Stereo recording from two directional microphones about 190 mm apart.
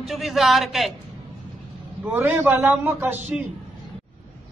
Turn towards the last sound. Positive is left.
turn(degrees=-10)  # may be behind; listen again after turning